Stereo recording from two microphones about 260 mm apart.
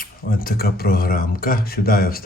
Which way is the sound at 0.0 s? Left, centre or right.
Left.